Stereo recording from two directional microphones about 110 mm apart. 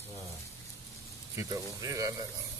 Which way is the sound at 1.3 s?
30° right (ahead or behind).